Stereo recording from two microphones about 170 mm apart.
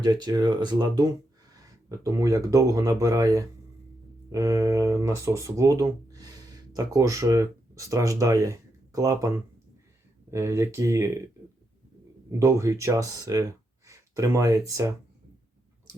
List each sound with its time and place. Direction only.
0.0 s speech: 25° right (ahead or behind)
10.3 s speech: 15° right (ahead or behind)
12.3 s speech: 15° right (ahead or behind)